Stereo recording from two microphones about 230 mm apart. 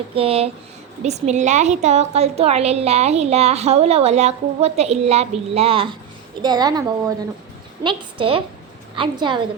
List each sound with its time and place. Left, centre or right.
0.1 s a woman's voice: right